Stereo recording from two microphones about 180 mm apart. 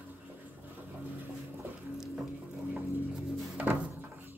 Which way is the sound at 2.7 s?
10° right (ahead or behind).